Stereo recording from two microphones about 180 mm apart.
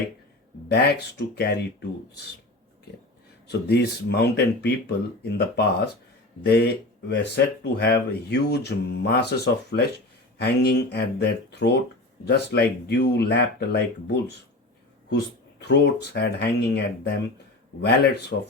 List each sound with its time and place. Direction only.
0.7 s speech: 65° left (ahead or behind)
3.4 s speech: 65° left (ahead or behind)
15.1 s speech: 70° left (ahead or behind)